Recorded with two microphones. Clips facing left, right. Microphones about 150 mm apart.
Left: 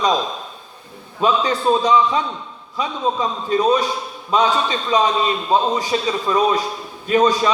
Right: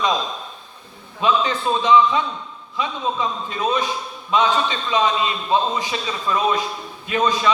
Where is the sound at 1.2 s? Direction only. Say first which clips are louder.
Left 2 dB; 40° left (ahead or behind).